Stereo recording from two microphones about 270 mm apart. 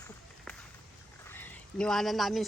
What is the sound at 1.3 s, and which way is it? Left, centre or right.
Speech, centre.